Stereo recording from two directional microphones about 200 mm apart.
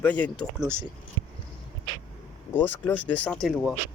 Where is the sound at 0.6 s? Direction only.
10° right (ahead or behind).